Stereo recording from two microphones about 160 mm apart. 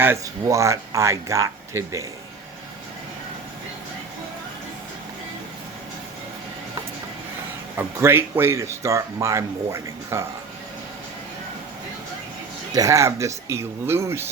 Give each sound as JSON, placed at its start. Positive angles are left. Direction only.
{"t": 0.0, "sound": "speech", "side_deg": -15}
{"t": 7.8, "sound": "speech", "side_deg": -15}
{"t": 12.7, "sound": "speech", "side_deg": -20}